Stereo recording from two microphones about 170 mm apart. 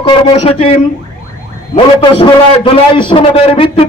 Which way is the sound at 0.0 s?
35° left (ahead or behind).